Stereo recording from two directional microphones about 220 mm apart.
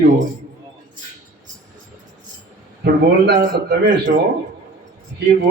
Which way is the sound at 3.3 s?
40° right (ahead or behind).